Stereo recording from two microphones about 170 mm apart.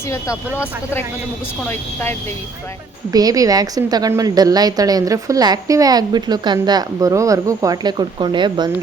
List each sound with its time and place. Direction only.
0.1 s speech: 15° left (ahead or behind)
3.1 s a woman's voice: 20° right (ahead or behind)